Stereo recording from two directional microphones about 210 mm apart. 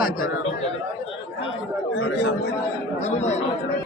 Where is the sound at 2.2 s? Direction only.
55° left (ahead or behind).